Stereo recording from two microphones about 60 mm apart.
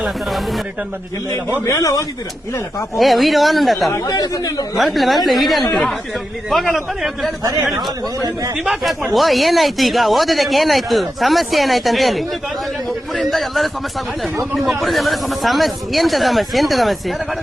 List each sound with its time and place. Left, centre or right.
0.0 s speech: centre
1.6 s speech: left
2.9 s speech: centre
3.9 s speech: left
4.8 s speech: centre
8.5 s speech: centre
13.3 s speech: centre